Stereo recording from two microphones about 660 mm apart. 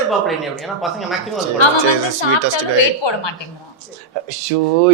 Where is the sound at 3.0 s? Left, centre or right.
Left.